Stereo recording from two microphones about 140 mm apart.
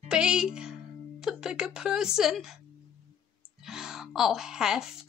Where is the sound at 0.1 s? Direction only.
5° right (ahead or behind).